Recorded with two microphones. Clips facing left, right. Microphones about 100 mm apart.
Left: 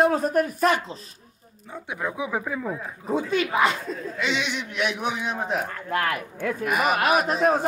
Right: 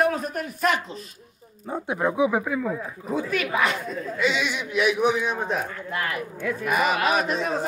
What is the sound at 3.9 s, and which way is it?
A man's voice, 5° right (ahead or behind).